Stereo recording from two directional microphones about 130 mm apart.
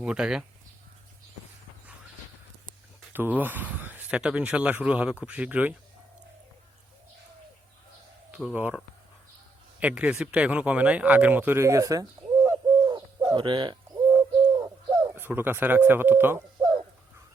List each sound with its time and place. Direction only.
0.0 s speech: 5° right (ahead or behind)
3.1 s speech: 15° right (ahead or behind)
8.5 s speech: 10° right (ahead or behind)
9.8 s speech: 10° right (ahead or behind); by 12.9 s 25° right (ahead or behind)
12.9 s bird: 35° right (ahead or behind)
14.6 s bird: 25° right (ahead or behind)
15.1 s speech: 15° right (ahead or behind)
16.6 s a sound: 35° right (ahead or behind)